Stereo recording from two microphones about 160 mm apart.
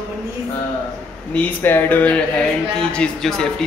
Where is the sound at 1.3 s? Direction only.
10° left (ahead or behind).